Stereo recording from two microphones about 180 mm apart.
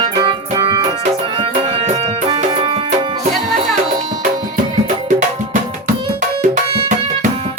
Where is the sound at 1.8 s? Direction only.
30° right (ahead or behind).